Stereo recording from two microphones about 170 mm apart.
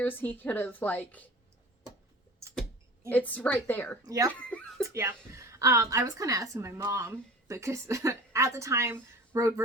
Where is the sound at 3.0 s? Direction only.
10° left (ahead or behind).